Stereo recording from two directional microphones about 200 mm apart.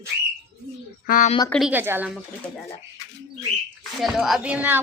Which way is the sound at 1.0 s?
40° left (ahead or behind).